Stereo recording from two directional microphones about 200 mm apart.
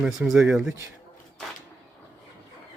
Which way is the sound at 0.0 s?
5° right (ahead or behind).